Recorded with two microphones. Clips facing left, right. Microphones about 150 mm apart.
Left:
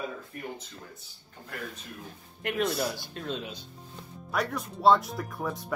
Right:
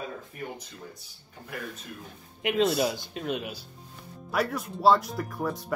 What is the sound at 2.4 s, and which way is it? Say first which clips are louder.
Speech: right 4 dB; 20° right (ahead or behind).